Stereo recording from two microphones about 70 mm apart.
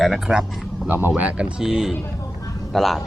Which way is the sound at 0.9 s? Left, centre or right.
Right.